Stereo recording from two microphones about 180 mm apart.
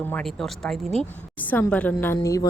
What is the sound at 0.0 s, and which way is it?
Speech, 5° left (ahead or behind).